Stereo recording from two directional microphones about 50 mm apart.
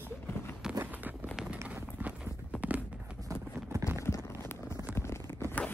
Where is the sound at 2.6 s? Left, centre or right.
Right.